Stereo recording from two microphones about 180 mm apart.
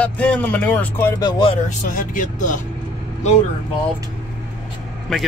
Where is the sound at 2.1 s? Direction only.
45° left (ahead or behind).